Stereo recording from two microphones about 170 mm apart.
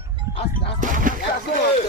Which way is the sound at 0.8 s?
50° right (ahead or behind).